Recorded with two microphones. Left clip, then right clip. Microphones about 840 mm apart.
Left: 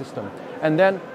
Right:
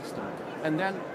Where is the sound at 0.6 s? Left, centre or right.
Left.